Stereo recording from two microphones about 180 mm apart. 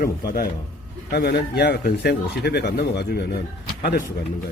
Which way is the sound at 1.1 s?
60° left (ahead or behind).